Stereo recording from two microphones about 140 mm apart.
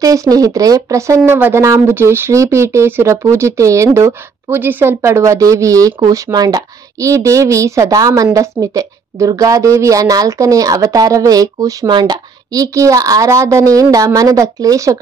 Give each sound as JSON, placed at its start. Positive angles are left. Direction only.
{"t": 0.0, "sound": "speech", "side_deg": -25}